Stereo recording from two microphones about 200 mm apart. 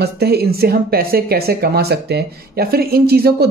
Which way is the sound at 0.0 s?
55° right (ahead or behind).